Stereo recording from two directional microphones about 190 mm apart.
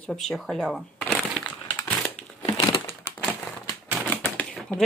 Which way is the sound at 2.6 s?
25° left (ahead or behind).